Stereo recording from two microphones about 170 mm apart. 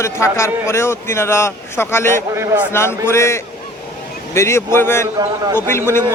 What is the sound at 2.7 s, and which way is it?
A man's voice, 15° left (ahead or behind).